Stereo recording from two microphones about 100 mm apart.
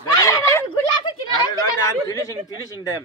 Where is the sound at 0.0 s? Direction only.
35° left (ahead or behind).